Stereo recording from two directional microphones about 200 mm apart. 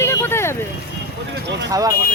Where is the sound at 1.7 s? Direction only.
20° right (ahead or behind).